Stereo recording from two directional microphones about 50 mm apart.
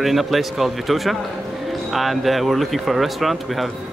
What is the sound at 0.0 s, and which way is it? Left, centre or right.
Speech, centre.